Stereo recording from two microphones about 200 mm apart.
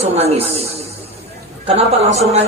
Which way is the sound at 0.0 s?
30° right (ahead or behind).